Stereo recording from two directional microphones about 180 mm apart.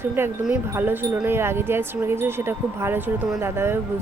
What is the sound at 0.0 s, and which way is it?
Speech, 10° right (ahead or behind).